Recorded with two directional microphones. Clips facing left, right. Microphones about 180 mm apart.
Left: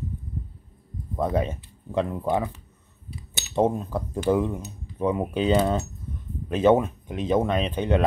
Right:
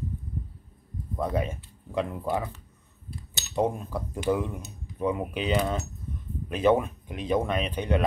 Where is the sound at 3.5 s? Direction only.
25° left (ahead or behind).